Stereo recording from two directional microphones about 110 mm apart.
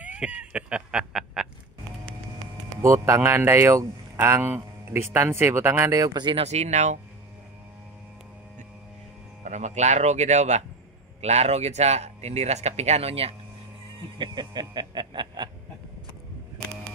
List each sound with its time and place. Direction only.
0.0 s a sound: 10° right (ahead or behind)
2.8 s speech: 25° right (ahead or behind)
6.3 s speech: 85° right
9.4 s speech: 90° right; by 13.4 s 65° right (ahead or behind)
14.1 s speech: 45° right (ahead or behind)